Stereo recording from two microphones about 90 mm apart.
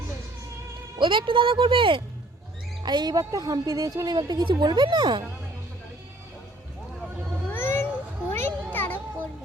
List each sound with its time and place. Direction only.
0.9 s speech: 65° right (ahead or behind)
2.8 s speech: 50° right (ahead or behind)
7.5 s cat: 25° left (ahead or behind)
8.3 s a sound: 25° left (ahead or behind)